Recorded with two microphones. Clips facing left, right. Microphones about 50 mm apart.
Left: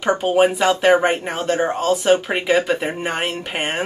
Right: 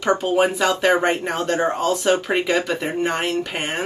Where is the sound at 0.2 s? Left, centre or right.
Left.